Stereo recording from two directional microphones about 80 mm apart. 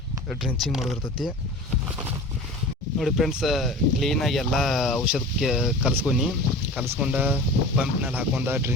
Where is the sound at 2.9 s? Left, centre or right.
Centre.